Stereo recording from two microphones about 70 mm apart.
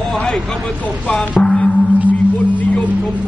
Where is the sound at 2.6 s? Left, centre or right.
Left.